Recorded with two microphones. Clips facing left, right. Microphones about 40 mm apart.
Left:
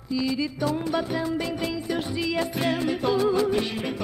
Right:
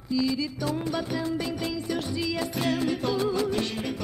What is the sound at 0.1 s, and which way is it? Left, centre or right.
Music, centre.